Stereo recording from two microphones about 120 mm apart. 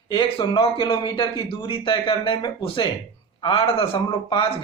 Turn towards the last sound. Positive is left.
turn(degrees=50)  # may be behind; listen again after turning